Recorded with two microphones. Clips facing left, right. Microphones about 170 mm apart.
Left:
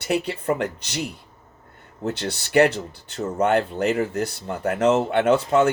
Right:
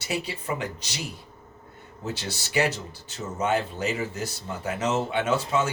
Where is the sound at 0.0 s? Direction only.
55° left (ahead or behind).